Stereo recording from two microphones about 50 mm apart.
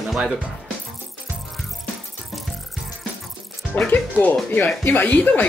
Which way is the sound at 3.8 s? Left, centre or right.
Left.